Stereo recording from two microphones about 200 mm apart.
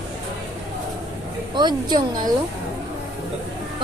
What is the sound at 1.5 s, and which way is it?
Speech, 20° right (ahead or behind).